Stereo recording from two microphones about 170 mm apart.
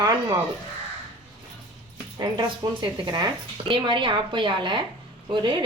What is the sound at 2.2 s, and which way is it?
A woman's voice, 25° right (ahead or behind).